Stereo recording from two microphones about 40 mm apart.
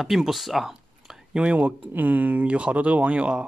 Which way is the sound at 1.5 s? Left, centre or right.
Right.